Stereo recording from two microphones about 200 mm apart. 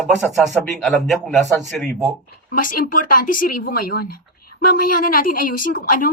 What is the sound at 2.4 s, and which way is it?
Speech, 45° left (ahead or behind).